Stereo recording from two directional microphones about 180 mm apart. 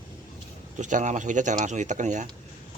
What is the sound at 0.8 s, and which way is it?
Speech, 45° right (ahead or behind).